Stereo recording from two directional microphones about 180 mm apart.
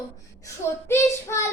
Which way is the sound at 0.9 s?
15° left (ahead or behind).